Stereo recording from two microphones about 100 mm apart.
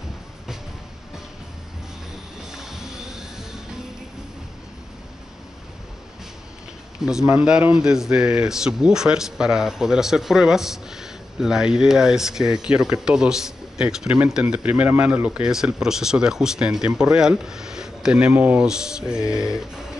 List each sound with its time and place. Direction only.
2.5 s music: 5° right (ahead or behind)
7.0 s speech: 5° right (ahead or behind)
18.7 s speech: 5° right (ahead or behind)
19.4 s music: 5° right (ahead or behind)